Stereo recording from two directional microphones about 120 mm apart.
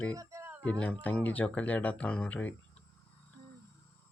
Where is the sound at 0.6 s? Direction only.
10° left (ahead or behind).